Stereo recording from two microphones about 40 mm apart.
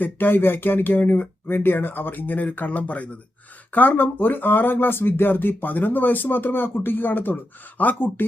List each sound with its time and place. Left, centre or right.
0.0 s speech: left
3.7 s speech: left
7.8 s speech: left